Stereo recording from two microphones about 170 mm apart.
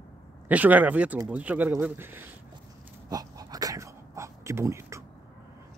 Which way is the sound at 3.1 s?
20° right (ahead or behind).